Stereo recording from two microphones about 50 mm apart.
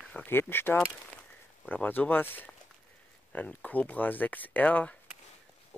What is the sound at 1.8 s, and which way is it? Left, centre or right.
Speech, left.